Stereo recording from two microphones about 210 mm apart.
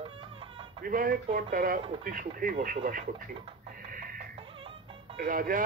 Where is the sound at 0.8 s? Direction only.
40° right (ahead or behind).